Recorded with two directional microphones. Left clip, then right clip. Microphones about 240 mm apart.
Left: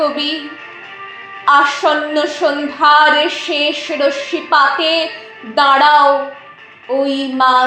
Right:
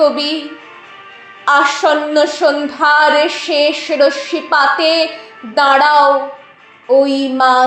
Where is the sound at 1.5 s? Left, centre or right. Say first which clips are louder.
Even; right.